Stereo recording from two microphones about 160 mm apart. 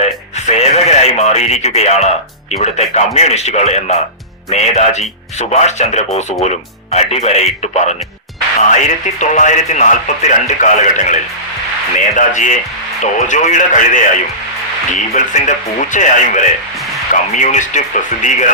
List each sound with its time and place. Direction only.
0.0 s music: 45° left (ahead or behind)
2.5 s speech: 45° left (ahead or behind)
9.2 s speech: 50° left (ahead or behind)
15.1 s speech: 50° left (ahead or behind)